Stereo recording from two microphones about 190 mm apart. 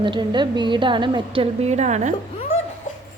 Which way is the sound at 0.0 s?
25° right (ahead or behind).